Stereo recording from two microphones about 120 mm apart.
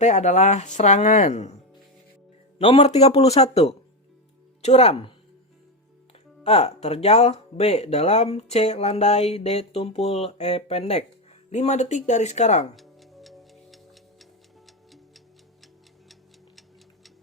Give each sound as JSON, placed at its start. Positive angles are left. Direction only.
{"t": 0.0, "sound": "speech", "side_deg": 75}
{"t": 2.6, "sound": "speech", "side_deg": 60}
{"t": 6.4, "sound": "speech", "side_deg": 60}
{"t": 11.5, "sound": "speech", "side_deg": 75}
{"t": 12.7, "sound": "tick-tock", "side_deg": 0}